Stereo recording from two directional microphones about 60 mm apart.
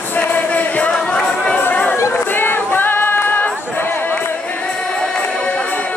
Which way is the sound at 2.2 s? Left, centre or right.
Left.